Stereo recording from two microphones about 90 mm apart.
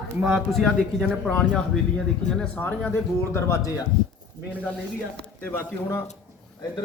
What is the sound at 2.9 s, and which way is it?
Speech, 25° left (ahead or behind).